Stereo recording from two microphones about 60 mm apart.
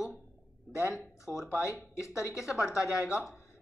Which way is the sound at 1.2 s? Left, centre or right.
Left.